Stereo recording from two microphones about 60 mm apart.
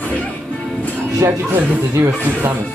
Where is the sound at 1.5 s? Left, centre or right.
Right.